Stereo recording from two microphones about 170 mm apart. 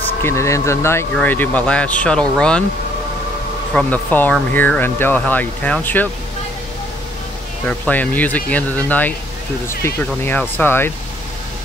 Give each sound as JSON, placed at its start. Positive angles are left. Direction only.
{"t": 0.2, "sound": "speech", "side_deg": 15}
{"t": 3.7, "sound": "speech", "side_deg": 10}
{"t": 7.6, "sound": "speech", "side_deg": 10}